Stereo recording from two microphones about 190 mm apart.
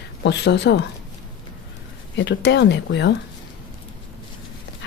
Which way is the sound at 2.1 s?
65° left (ahead or behind).